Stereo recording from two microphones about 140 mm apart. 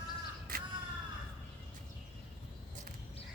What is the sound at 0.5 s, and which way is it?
Crow, 90° right.